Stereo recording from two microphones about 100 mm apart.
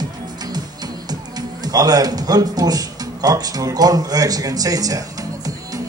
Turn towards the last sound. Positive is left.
turn(degrees=-35)  # may be behind; listen again after turning